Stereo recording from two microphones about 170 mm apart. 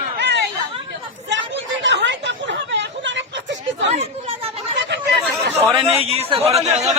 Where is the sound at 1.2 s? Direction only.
90° right.